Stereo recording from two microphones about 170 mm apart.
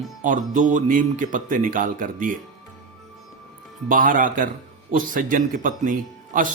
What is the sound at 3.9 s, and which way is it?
A man's voice, 55° right (ahead or behind).